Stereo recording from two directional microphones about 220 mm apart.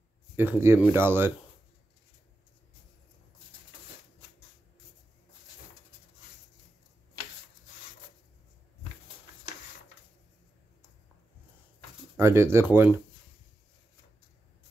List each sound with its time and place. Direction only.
0.4 s speech: 10° right (ahead or behind)
12.2 s speech: 10° right (ahead or behind)